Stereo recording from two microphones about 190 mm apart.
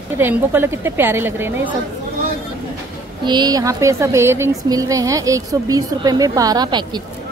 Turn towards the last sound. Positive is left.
turn(degrees=-25)  # may be behind; listen again after turning